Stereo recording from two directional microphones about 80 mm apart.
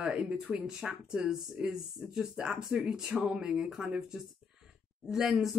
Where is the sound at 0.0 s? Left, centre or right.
Centre.